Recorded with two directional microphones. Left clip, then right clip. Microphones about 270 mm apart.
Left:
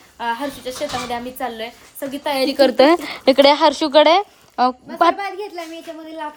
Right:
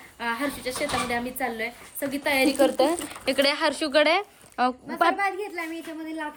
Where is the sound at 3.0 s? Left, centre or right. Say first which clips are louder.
Left 11 dB; centre.